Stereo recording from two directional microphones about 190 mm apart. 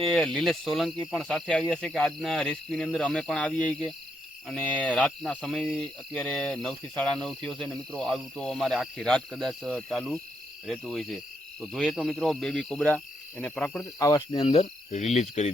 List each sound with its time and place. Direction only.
0.1 s speech: 5° left (ahead or behind)
14.0 s speech: 20° left (ahead or behind); by 15.4 s 35° left (ahead or behind)